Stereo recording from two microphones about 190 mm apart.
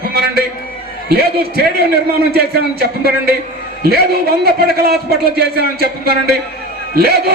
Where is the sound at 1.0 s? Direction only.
55° right (ahead or behind).